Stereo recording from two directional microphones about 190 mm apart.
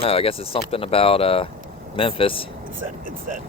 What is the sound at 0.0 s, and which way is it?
Speech, 30° left (ahead or behind).